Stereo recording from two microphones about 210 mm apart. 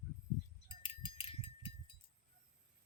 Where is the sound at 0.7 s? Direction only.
25° left (ahead or behind).